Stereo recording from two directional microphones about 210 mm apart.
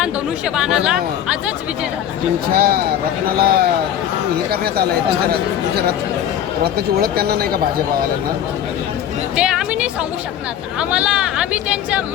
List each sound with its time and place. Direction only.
0.0 s speech: 5° right (ahead or behind)
2.5 s speech: 45° right (ahead or behind)
6.7 s speech: 45° right (ahead or behind)
9.3 s speech: 5° right (ahead or behind)